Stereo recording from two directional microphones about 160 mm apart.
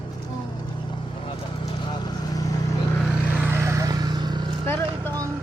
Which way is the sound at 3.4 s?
15° right (ahead or behind).